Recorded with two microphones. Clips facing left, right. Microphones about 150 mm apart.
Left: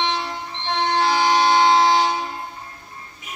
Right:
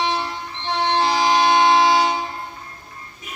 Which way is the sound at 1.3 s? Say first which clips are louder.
Right 1 dB; 20° right (ahead or behind).